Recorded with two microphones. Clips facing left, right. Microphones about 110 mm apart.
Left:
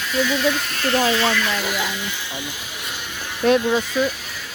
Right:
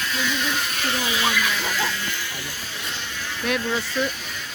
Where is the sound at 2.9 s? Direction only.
15° left (ahead or behind).